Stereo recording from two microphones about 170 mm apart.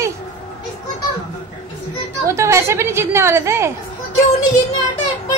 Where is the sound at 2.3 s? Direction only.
15° right (ahead or behind).